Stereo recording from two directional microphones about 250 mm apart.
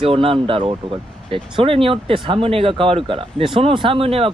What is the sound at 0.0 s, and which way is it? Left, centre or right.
Speech, right.